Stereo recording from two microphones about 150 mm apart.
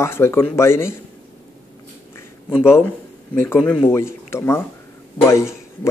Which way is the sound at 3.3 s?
15° left (ahead or behind).